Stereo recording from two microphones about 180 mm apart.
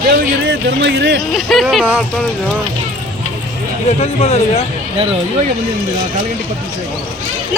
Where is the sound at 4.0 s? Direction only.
35° left (ahead or behind).